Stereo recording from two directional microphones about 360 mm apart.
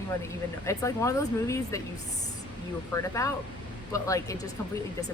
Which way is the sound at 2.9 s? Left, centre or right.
Centre.